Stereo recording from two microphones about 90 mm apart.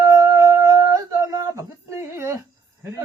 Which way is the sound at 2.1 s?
30° right (ahead or behind).